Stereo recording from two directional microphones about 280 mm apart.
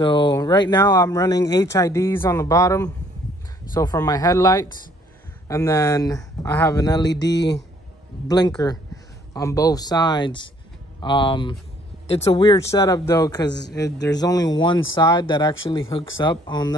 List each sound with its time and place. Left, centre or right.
0.0 s speech: centre
7.1 s a sound: left
8.3 s speech: centre